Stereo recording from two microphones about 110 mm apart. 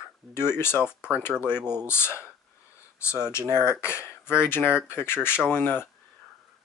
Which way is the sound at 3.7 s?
25° left (ahead or behind).